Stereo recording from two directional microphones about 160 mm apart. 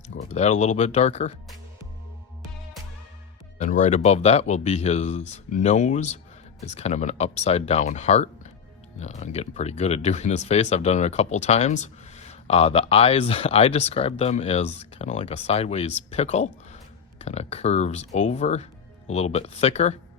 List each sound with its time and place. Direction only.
0.2 s speech: 45° left (ahead or behind)
3.6 s speech: 50° left (ahead or behind)